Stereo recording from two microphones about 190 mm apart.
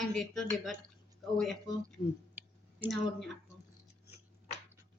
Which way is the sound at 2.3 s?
10° right (ahead or behind).